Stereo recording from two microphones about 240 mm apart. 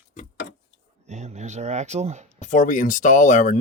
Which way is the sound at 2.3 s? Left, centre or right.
Left.